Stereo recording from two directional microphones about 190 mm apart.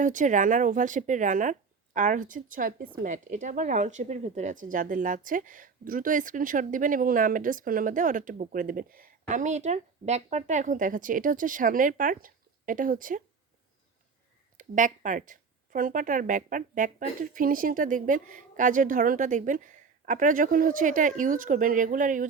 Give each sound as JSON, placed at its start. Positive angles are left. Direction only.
{"t": 0.0, "sound": "speech", "side_deg": -40}
{"t": 9.2, "sound": "speech", "side_deg": -40}
{"t": 14.6, "sound": "speech", "side_deg": -40}